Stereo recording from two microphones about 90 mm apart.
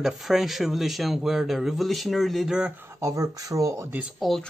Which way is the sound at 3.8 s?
20° right (ahead or behind).